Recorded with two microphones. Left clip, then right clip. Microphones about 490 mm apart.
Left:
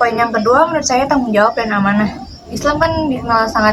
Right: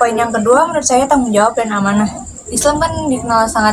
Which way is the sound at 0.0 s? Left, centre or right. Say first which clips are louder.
Even; left.